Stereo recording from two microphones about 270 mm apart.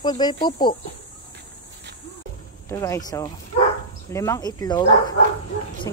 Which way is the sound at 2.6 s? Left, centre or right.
Centre.